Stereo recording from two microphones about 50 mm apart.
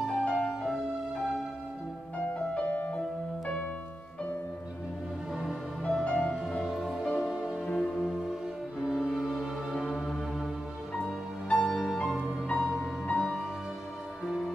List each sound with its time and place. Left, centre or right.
0.2 s music: centre
2.1 s music: left
5.3 s music: centre
5.9 s music: centre
6.6 s music: centre
7.6 s music: left
8.0 s music: centre
11.5 s music: centre